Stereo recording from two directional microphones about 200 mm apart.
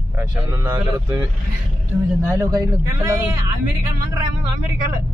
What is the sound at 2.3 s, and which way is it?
Speech, 15° right (ahead or behind).